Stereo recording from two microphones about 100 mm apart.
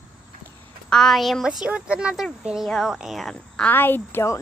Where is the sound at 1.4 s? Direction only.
10° right (ahead or behind).